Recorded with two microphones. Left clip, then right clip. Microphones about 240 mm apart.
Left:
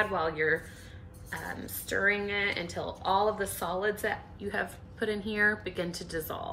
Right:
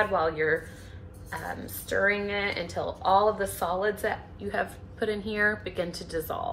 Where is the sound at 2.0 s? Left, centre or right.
Left.